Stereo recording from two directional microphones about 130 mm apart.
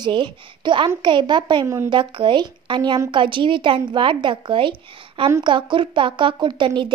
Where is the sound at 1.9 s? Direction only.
40° right (ahead or behind).